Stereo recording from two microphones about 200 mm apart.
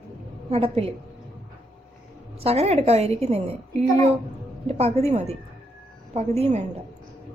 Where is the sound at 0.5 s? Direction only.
30° right (ahead or behind).